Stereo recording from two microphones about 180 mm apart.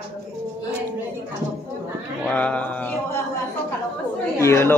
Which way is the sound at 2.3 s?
5° left (ahead or behind).